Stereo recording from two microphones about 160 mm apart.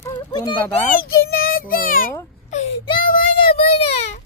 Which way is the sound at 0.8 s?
65° left (ahead or behind).